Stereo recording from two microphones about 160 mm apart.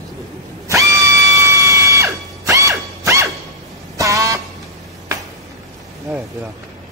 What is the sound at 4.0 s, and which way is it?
Vehicle horn, 20° right (ahead or behind).